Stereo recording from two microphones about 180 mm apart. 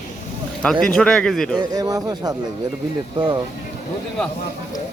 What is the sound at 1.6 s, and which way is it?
Speech, 20° right (ahead or behind).